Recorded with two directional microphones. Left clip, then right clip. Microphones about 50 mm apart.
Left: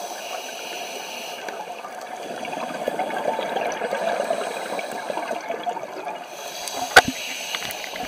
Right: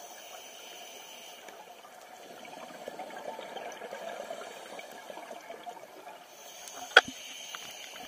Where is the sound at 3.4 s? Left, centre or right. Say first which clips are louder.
Left 16 dB; centre.